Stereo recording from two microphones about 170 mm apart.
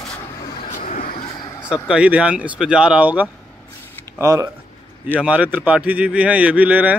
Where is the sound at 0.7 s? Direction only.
50° left (ahead or behind).